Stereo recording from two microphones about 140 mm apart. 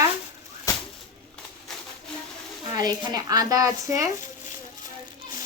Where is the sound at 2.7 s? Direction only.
30° right (ahead or behind).